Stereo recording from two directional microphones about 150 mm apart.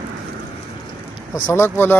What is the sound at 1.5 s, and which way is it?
Speech, 15° left (ahead or behind).